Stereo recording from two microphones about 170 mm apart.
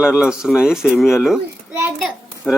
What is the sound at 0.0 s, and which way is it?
A child's voice, 5° right (ahead or behind).